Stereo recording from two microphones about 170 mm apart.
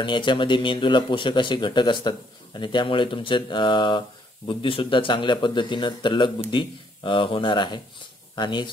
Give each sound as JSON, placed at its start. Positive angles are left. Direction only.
{"t": 0.0, "sound": "speech", "side_deg": 30}